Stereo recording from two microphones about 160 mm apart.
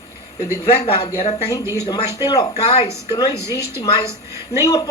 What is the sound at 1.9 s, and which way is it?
Speech, 25° left (ahead or behind).